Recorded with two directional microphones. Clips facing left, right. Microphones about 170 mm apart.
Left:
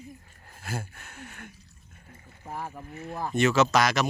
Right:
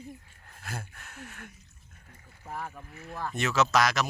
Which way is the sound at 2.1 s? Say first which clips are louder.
Left 5 dB; 5° left (ahead or behind).